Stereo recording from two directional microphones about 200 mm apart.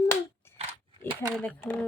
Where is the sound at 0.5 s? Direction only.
30° right (ahead or behind).